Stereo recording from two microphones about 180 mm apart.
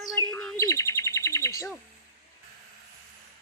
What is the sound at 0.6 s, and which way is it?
Bird, 20° left (ahead or behind).